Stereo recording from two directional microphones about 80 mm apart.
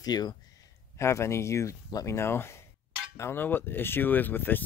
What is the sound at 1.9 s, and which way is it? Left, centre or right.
Speech, left.